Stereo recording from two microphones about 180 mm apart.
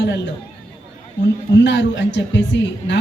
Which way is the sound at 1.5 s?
80° left.